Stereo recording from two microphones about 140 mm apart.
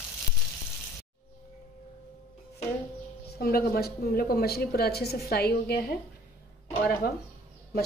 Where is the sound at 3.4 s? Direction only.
90° left.